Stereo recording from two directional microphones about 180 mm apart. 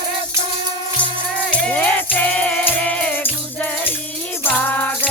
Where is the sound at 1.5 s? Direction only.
5° left (ahead or behind).